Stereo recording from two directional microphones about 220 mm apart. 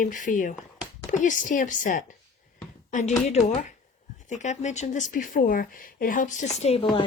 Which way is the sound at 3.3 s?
30° left (ahead or behind).